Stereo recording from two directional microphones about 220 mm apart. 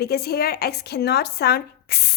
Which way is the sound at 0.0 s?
45° left (ahead or behind).